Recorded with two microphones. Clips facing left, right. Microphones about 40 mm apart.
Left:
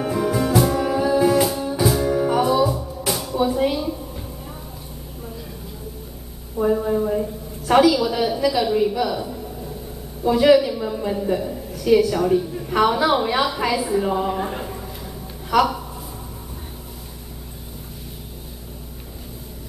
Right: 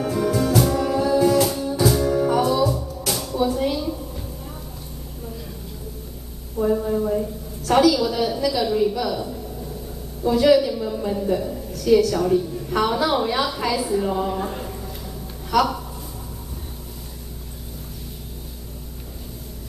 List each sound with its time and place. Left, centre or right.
0.0 s music: centre
6.5 s a sound: centre
10.2 s a woman's voice: centre